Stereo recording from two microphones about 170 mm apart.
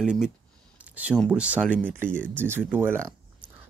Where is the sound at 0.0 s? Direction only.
5° right (ahead or behind).